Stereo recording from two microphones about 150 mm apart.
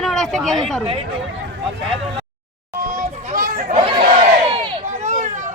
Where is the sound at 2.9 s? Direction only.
65° right (ahead or behind).